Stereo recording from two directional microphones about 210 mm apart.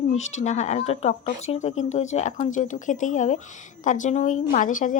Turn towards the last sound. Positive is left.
turn(degrees=40)  # may be behind; listen again after turning